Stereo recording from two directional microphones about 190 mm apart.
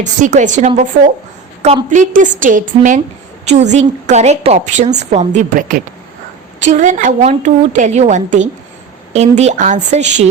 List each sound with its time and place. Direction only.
0.0 s a woman's voice: 40° right (ahead or behind)